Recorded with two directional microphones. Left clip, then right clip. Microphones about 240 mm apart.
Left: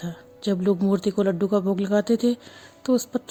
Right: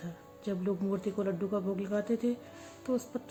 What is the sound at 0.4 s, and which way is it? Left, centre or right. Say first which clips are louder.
A woman's voice: left 11 dB; left.